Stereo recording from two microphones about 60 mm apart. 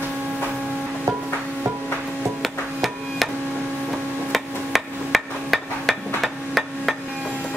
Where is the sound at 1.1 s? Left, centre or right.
Right.